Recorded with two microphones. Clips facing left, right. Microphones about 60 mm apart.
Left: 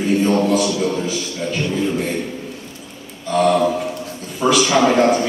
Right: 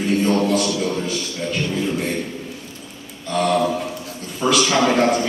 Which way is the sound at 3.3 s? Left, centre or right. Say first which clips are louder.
Left 3 dB; centre.